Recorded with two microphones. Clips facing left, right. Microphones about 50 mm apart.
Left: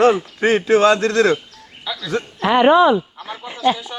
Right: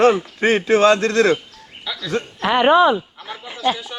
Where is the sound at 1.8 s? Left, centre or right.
Centre.